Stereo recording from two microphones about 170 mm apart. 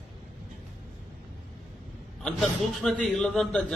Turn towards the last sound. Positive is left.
turn(degrees=5)  # may be behind; listen again after turning